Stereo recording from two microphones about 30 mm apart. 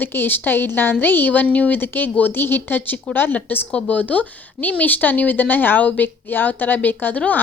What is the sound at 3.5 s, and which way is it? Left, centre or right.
Speech, left.